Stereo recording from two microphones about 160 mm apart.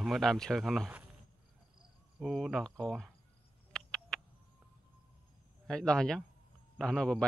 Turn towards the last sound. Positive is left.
turn(degrees=5)  # may be behind; listen again after turning